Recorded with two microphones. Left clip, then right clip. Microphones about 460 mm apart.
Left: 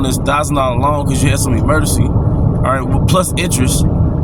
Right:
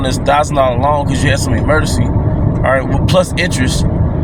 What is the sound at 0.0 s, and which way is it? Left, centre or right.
Speech, left.